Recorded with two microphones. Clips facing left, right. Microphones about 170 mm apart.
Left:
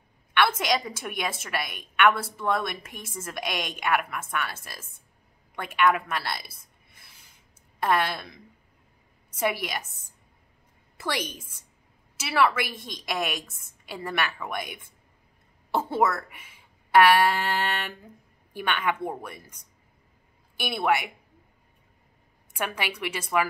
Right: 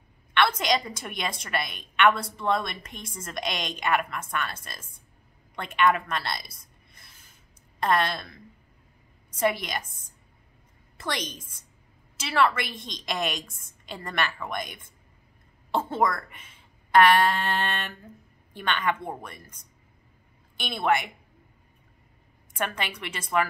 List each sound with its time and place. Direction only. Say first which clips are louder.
0.3 s a woman's voice: even; 5° left (ahead or behind)
5.6 s a woman's voice: even; 5° left (ahead or behind)
11.0 s a woman's voice: left 2 dB; 10° left (ahead or behind)
20.5 s a woman's voice: even; 10° left (ahead or behind)
22.5 s a woman's voice: even; 10° left (ahead or behind)